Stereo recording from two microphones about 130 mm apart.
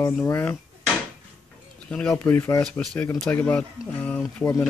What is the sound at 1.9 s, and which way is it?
Speech, 10° left (ahead or behind).